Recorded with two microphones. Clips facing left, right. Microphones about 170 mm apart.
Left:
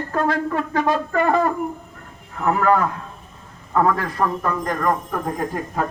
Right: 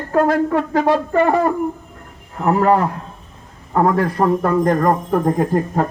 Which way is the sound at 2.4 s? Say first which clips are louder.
Right 3 dB; 30° right (ahead or behind).